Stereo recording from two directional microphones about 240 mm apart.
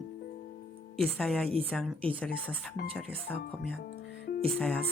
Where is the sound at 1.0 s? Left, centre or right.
Centre.